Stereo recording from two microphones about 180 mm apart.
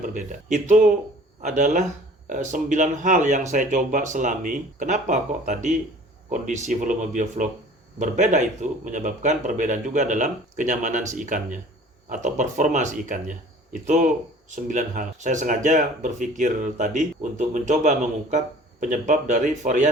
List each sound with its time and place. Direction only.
0.0 s speech: 45° right (ahead or behind)